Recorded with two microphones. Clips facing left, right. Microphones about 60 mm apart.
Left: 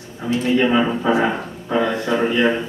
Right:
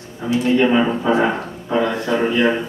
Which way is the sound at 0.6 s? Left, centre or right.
Centre.